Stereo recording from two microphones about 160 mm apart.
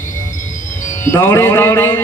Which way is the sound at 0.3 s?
55° left (ahead or behind).